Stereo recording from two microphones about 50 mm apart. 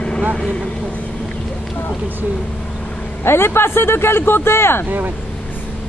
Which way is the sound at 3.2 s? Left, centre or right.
Left.